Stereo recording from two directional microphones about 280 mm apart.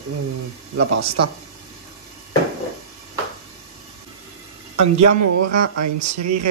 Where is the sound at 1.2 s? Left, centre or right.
Right.